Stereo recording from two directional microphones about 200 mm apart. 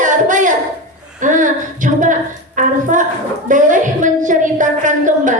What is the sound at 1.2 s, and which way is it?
A woman's voice, 40° right (ahead or behind).